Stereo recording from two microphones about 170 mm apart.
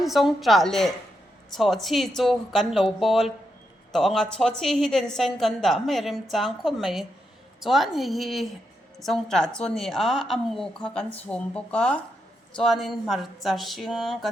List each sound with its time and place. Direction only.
0.0 s a woman's voice: centre (ahead or behind)